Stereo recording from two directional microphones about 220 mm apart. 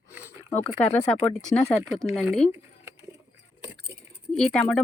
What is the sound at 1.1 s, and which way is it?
Speech, 5° left (ahead or behind).